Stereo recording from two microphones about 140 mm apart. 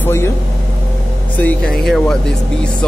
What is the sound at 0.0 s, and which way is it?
Speech, 20° left (ahead or behind).